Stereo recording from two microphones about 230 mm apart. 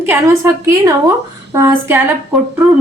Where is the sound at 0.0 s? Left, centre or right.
Centre.